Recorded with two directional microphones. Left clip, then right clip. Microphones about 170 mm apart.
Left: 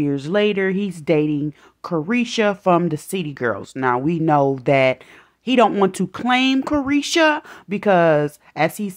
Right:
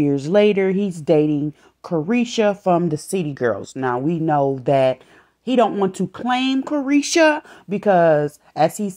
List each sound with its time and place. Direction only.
0.0 s speech: centre (ahead or behind); by 5.7 s 15° left (ahead or behind)
5.7 s speech: 25° left (ahead or behind)
6.2 s speech: 10° left (ahead or behind)
6.9 s speech: centre (ahead or behind)
7.7 s speech: 15° left (ahead or behind)